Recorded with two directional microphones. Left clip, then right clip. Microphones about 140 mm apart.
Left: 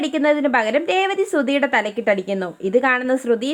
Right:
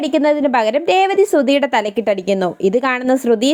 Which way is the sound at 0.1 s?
30° right (ahead or behind).